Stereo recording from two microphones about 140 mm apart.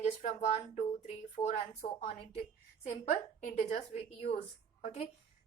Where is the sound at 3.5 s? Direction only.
55° left (ahead or behind).